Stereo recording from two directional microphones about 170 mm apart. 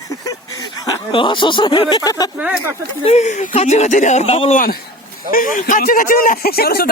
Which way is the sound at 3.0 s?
40° left (ahead or behind).